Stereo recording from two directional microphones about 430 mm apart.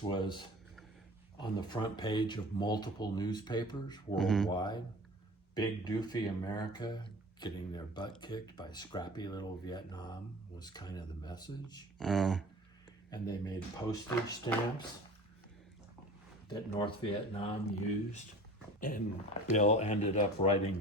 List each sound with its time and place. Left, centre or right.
0.1 s speech: centre
16.5 s speech: centre